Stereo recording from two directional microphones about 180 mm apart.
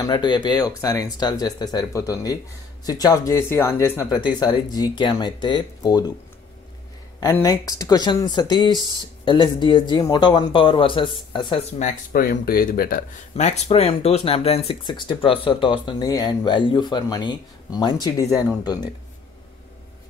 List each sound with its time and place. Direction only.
0.0 s speech: 25° left (ahead or behind)
7.2 s speech: 20° left (ahead or behind)
11.8 s speech: 50° left (ahead or behind); by 18.9 s 20° left (ahead or behind)